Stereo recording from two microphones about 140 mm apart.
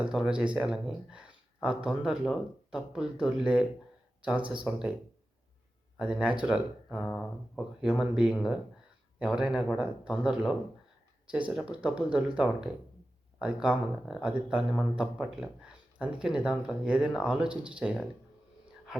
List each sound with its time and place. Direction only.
0.0 s speech: 5° right (ahead or behind)
6.0 s speech: 10° right (ahead or behind)
7.0 s speech: 5° left (ahead or behind)